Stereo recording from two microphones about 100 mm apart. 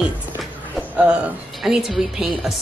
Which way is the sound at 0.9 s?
10° right (ahead or behind).